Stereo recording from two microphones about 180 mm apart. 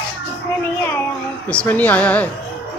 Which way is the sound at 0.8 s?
10° left (ahead or behind).